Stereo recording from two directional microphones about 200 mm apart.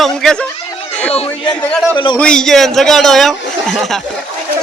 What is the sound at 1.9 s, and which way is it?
Speech, 25° left (ahead or behind).